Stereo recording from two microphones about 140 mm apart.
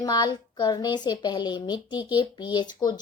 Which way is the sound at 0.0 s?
30° left (ahead or behind).